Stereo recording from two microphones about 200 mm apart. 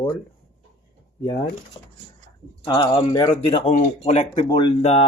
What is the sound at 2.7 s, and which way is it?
Speech, 25° left (ahead or behind).